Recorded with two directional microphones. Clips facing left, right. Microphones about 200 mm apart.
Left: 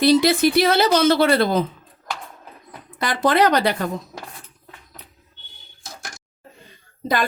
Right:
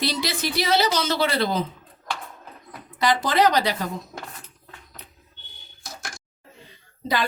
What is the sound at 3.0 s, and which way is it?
Speech, 55° left (ahead or behind).